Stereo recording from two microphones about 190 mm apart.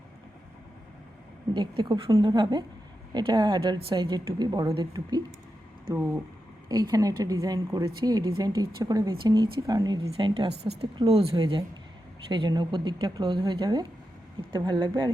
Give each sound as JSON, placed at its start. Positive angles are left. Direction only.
{"t": 1.5, "sound": "speech", "side_deg": -25}
{"t": 6.7, "sound": "a woman's voice", "side_deg": -20}
{"t": 10.5, "sound": "speech", "side_deg": -60}
{"t": 10.9, "sound": "speech", "side_deg": -30}